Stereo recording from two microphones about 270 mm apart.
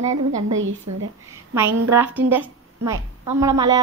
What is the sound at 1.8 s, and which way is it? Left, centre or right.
A woman's voice, centre.